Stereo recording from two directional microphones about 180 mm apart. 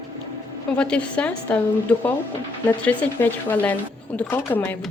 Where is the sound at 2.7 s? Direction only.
10° left (ahead or behind).